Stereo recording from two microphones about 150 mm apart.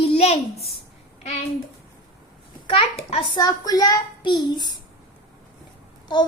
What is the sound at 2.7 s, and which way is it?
Speech, 40° left (ahead or behind).